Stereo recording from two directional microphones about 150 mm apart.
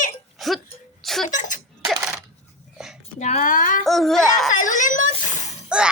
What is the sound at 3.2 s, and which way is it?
Speech, 50° left (ahead or behind).